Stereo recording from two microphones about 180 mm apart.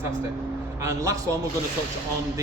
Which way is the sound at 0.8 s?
20° right (ahead or behind).